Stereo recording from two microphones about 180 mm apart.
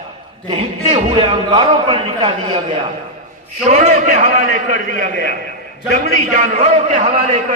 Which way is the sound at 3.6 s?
40° right (ahead or behind).